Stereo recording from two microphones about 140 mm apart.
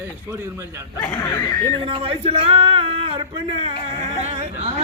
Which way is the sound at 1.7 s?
40° right (ahead or behind).